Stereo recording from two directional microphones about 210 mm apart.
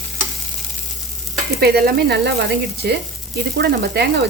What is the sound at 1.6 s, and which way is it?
Sizzle, 50° right (ahead or behind).